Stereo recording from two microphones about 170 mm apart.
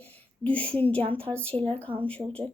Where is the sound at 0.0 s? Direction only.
10° left (ahead or behind).